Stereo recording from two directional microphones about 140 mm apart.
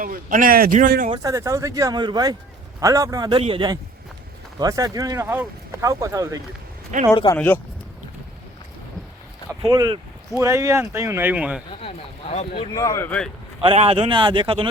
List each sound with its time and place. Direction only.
0.0 s a man's voice: 75° right (ahead or behind)
1.1 s speech: 25° right (ahead or behind)
3.2 s speech: 40° right (ahead or behind)
4.6 s speech: 25° right (ahead or behind)
7.1 s speech: 30° left (ahead or behind)
7.3 s speech: 10° left (ahead or behind)
9.5 s speech: 25° right (ahead or behind); by 11.6 s 10° right (ahead or behind)
11.8 s speech: 50° left (ahead or behind)
12.7 s speech: 25° left (ahead or behind)
13.1 s speech: 5° left (ahead or behind)
13.7 s speech: 40° right (ahead or behind)